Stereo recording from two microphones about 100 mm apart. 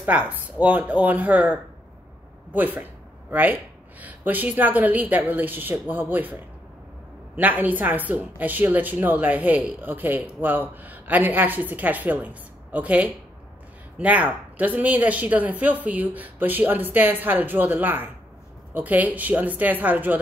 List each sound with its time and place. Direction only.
0.0 s a woman's voice: 15° right (ahead or behind)
7.3 s a woman's voice: 15° right (ahead or behind)